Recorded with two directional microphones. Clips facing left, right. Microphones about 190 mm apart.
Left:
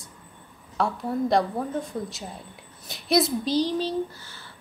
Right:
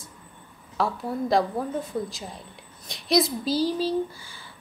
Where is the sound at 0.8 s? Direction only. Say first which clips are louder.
Even; centre (ahead or behind).